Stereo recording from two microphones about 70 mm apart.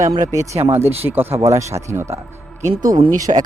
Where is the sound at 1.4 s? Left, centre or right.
Right.